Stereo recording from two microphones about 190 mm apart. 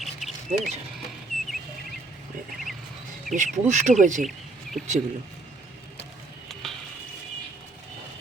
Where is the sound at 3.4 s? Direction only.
40° right (ahead or behind).